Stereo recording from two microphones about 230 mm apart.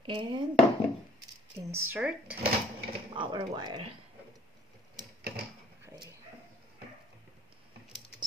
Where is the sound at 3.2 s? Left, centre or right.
Centre.